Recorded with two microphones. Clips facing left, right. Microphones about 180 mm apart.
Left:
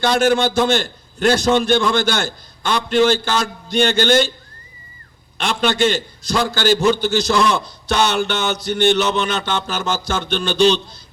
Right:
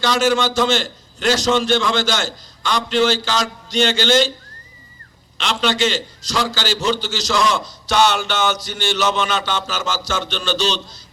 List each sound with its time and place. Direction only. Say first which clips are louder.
0.0 s a man's voice: left 2 dB; 55° left (ahead or behind)
5.4 s a man's voice: left 2 dB; 55° left (ahead or behind)